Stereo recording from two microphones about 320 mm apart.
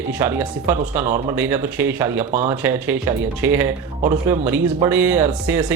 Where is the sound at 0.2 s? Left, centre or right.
Centre.